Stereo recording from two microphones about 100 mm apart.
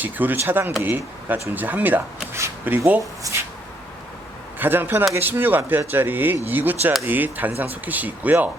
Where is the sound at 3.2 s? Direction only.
35° right (ahead or behind).